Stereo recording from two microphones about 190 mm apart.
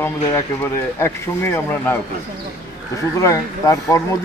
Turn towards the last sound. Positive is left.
turn(degrees=15)  # may be behind; listen again after turning